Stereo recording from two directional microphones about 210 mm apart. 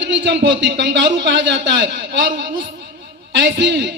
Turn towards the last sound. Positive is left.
turn(degrees=-55)  # may be behind; listen again after turning